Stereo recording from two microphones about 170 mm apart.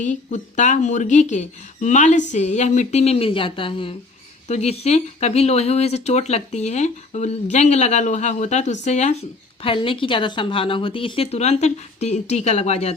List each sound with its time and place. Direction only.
0.0 s speech: 45° left (ahead or behind)
9.6 s speech: 30° left (ahead or behind)